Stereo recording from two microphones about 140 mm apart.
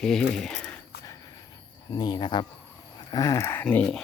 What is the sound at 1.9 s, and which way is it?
Speech, 30° left (ahead or behind).